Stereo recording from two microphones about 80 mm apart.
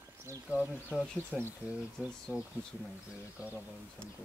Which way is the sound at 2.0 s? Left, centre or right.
Centre.